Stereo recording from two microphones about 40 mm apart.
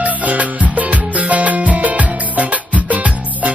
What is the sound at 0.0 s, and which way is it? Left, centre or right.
Music, right.